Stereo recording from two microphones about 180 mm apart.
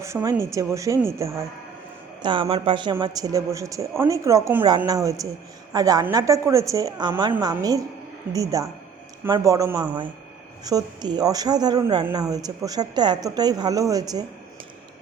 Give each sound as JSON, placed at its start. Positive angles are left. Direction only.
{"t": 0.0, "sound": "a woman's voice", "side_deg": -15}
{"t": 2.2, "sound": "a woman's voice", "side_deg": -25}